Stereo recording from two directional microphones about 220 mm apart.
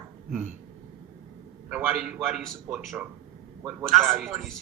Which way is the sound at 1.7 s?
5° right (ahead or behind).